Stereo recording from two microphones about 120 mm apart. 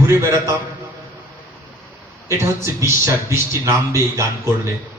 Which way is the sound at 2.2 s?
20° right (ahead or behind).